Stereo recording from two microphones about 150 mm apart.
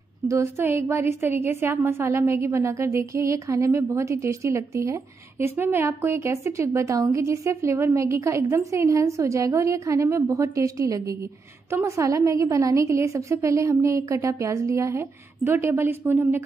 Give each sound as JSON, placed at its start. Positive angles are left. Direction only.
{"t": 0.3, "sound": "a woman's voice", "side_deg": -15}